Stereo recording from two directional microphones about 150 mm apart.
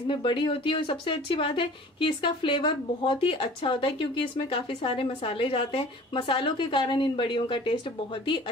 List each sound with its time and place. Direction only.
0.0 s speech: 35° left (ahead or behind)